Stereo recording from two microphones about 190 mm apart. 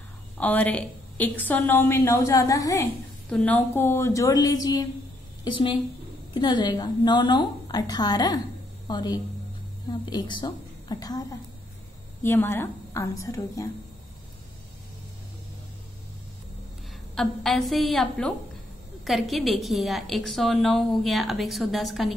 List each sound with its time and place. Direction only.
0.4 s a woman's voice: 10° left (ahead or behind)
3.3 s a woman's voice: 5° left (ahead or behind)
17.1 s a woman's voice: centre (ahead or behind)